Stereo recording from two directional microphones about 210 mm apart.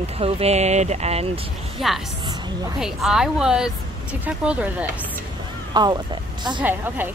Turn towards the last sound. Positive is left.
turn(degrees=-10)  # may be behind; listen again after turning